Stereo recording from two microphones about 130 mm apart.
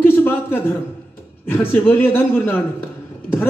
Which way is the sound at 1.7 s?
15° left (ahead or behind).